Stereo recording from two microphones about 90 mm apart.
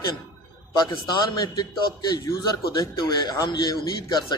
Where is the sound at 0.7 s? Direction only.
50° left (ahead or behind).